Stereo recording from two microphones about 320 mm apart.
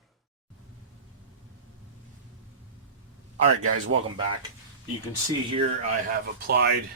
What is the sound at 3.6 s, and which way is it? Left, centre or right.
Speech, right.